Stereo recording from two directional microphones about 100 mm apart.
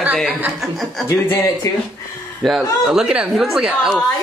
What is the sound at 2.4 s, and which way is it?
Speech, 5° right (ahead or behind).